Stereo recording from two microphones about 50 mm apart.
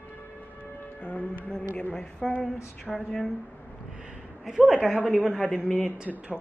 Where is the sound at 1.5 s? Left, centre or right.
Left.